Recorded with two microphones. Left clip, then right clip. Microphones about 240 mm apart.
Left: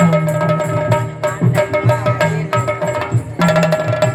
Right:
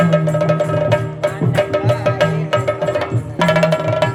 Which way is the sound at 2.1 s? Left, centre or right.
Right.